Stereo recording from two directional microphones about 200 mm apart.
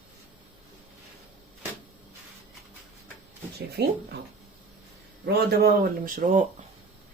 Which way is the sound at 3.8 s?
55° right (ahead or behind).